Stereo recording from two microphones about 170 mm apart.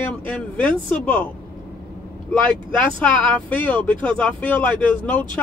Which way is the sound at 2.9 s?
10° left (ahead or behind).